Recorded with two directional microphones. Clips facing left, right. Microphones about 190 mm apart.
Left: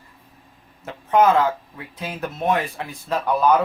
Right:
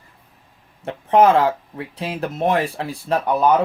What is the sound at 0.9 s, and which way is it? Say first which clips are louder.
Speech: right 3 dB; 30° right (ahead or behind).